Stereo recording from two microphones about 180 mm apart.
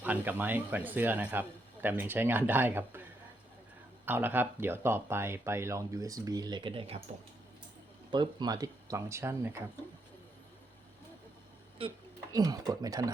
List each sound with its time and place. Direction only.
0.0 s speech: 10° right (ahead or behind)
4.0 s speech: 10° right (ahead or behind); by 7.0 s 30° right (ahead or behind)
8.1 s speech: 25° right (ahead or behind)
12.3 s speech: 20° right (ahead or behind)